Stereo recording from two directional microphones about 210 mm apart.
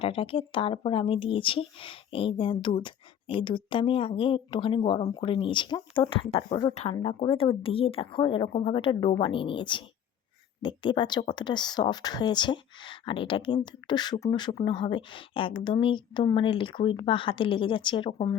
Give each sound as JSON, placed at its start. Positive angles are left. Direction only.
{"t": 0.0, "sound": "speech", "side_deg": 25}